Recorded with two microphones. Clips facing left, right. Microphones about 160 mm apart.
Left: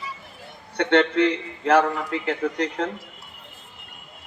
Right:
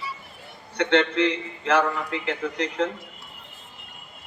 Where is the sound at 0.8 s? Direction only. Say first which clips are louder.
Left 2 dB; 40° left (ahead or behind).